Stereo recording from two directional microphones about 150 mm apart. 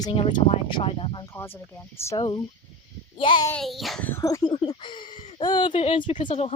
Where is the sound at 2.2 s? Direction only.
30° left (ahead or behind).